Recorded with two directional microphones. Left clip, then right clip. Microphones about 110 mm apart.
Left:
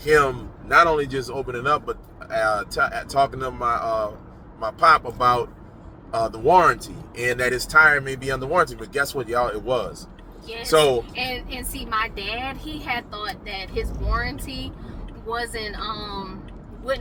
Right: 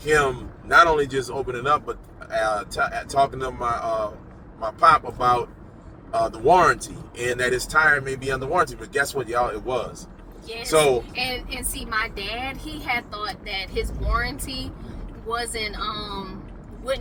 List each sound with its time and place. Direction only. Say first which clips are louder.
0.0 s a man's voice: left 2 dB; 25° left (ahead or behind)
11.9 s speech: left 1 dB; 40° right (ahead or behind)